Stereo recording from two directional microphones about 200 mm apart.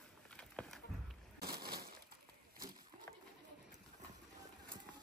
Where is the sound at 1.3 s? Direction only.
50° right (ahead or behind).